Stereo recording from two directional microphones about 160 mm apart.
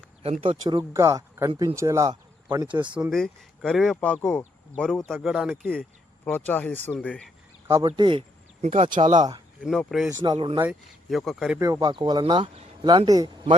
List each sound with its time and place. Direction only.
0.2 s speech: 40° right (ahead or behind)
0.9 s speech: 20° right (ahead or behind)
2.9 s speech: centre (ahead or behind)
6.2 s speech: 10° left (ahead or behind)
7.9 s speech: 30° right (ahead or behind)
8.6 s speech: 40° right (ahead or behind)
9.6 s speech: centre (ahead or behind)
10.3 s speech: 35° right (ahead or behind)
10.6 s speech: 5° right (ahead or behind)
11.5 s speech: 20° right (ahead or behind)